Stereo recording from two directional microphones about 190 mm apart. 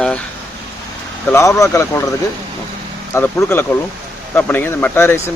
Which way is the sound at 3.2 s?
15° left (ahead or behind).